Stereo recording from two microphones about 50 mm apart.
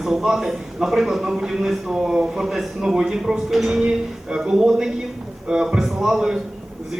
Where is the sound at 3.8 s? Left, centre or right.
Right.